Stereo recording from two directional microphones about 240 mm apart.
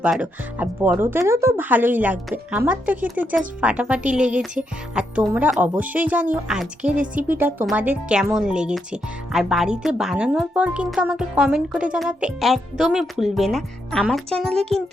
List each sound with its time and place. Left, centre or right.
0.0 s speech: centre
4.3 s music: right
4.9 s speech: centre